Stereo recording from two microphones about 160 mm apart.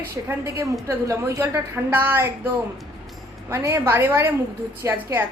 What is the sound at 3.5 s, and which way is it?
Speech, 15° right (ahead or behind).